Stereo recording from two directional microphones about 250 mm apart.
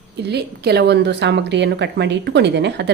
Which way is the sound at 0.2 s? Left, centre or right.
Right.